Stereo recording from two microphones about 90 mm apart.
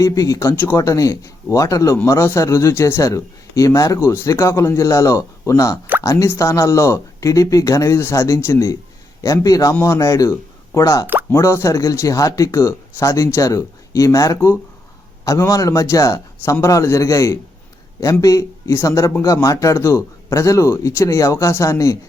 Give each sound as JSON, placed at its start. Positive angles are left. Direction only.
{"t": 0.0, "sound": "a man's voice", "side_deg": 40}
{"t": 0.5, "sound": "speech", "side_deg": 20}
{"t": 0.8, "sound": "a man's voice", "side_deg": 35}
{"t": 11.0, "sound": "plop", "side_deg": -20}
{"t": 11.3, "sound": "a man's voice", "side_deg": 30}